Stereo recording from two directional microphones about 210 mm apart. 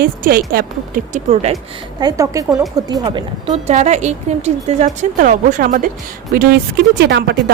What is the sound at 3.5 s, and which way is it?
Speech, 35° right (ahead or behind).